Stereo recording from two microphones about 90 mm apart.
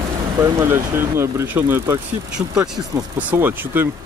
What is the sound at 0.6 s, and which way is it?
Speech, 30° right (ahead or behind).